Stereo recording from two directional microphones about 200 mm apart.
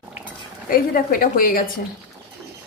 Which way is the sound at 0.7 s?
45° left (ahead or behind).